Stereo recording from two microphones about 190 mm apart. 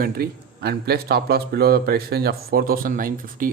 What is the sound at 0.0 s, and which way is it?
Speech, 55° right (ahead or behind).